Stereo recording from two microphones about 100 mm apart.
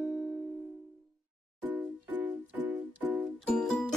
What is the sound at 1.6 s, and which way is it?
Music, 15° right (ahead or behind).